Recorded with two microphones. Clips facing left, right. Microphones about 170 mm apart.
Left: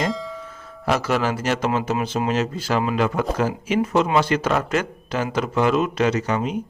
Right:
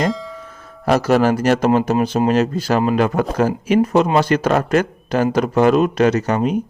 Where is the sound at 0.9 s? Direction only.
45° right (ahead or behind).